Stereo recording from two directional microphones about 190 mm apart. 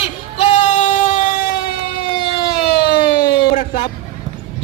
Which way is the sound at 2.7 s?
55° left (ahead or behind).